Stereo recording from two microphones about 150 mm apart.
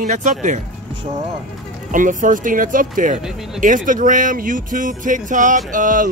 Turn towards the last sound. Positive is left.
turn(degrees=-60)  # may be behind; listen again after turning